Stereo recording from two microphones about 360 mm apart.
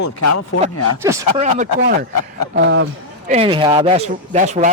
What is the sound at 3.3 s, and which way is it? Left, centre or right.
Speech, centre.